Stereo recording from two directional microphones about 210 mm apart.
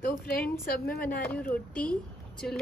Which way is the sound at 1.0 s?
10° left (ahead or behind).